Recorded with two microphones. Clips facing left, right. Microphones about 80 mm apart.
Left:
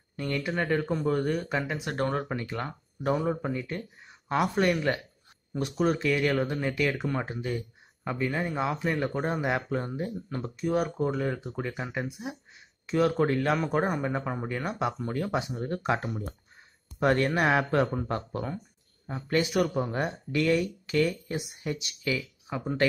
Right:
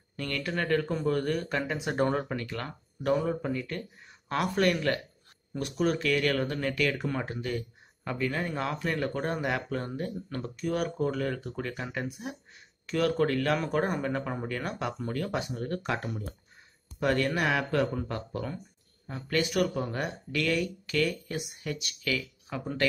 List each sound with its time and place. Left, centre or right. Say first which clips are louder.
0.2 s speech: left 2 dB; centre
1.6 s speech: right 1 dB; centre
2.2 s speech: left 2 dB; centre
7.1 s speech: left 1 dB; centre